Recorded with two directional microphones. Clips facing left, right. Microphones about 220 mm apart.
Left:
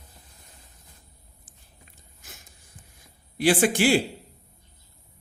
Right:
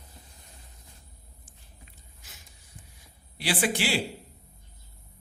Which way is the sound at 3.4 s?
45° left (ahead or behind).